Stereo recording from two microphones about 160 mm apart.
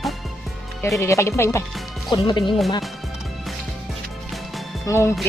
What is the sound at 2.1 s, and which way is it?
Speech, 30° left (ahead or behind).